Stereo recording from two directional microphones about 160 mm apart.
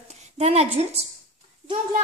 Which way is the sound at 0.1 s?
45° right (ahead or behind).